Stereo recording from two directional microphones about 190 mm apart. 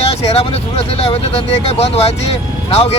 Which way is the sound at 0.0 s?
30° left (ahead or behind).